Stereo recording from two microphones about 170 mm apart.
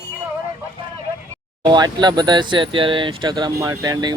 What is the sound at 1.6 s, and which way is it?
Speech, 25° right (ahead or behind).